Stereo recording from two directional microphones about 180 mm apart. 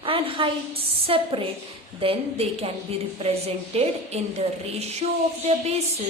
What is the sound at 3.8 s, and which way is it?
A woman's voice, 35° right (ahead or behind).